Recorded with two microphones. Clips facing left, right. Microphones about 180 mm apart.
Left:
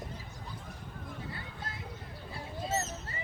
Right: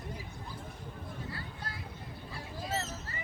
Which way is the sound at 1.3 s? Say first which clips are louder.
Even; 20° left (ahead or behind).